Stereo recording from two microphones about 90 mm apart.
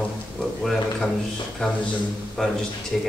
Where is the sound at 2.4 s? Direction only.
5° left (ahead or behind).